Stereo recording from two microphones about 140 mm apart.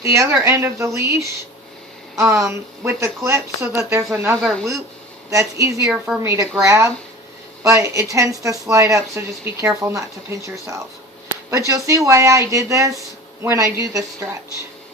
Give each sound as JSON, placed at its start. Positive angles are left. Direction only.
{"t": 0.0, "sound": "a woman's voice", "side_deg": -20}
{"t": 4.4, "sound": "speech", "side_deg": 0}
{"t": 5.3, "sound": "a woman's voice", "side_deg": -20}